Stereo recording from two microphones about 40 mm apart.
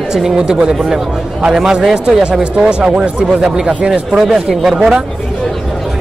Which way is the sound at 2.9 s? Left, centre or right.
Centre.